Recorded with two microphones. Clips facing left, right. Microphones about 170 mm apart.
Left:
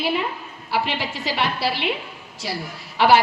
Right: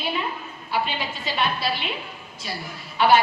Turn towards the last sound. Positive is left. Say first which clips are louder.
# left 2 dB
turn(degrees=80)